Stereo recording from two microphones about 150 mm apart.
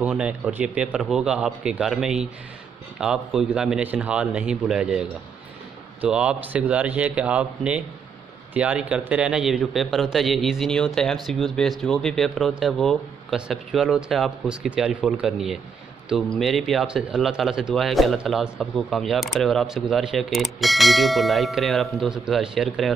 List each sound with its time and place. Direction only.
0.0 s speech: 10° right (ahead or behind)